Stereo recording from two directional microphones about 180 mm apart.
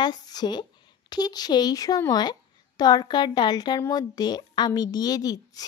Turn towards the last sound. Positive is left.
turn(degrees=20)  # may be behind; listen again after turning